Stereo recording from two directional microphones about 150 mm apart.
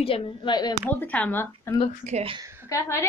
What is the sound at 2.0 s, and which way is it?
Speech, 45° right (ahead or behind).